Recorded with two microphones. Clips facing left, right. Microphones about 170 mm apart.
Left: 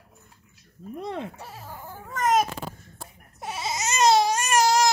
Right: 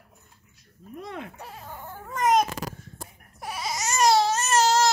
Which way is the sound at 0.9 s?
30° left (ahead or behind).